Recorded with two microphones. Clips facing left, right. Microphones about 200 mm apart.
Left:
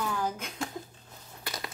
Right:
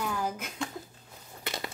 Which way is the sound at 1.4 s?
25° right (ahead or behind).